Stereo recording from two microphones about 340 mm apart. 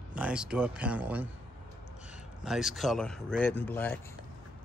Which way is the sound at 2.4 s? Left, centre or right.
Centre.